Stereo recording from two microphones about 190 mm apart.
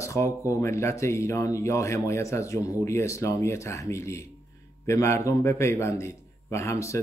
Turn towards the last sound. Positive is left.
turn(degrees=15)  # may be behind; listen again after turning